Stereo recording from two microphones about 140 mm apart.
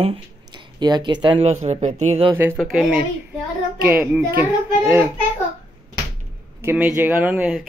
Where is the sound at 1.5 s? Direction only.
55° right (ahead or behind).